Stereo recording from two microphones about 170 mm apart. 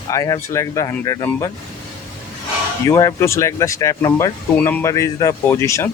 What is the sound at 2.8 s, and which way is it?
Speech, 20° left (ahead or behind).